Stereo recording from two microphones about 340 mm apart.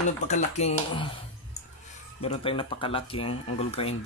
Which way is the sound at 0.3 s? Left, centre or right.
Centre.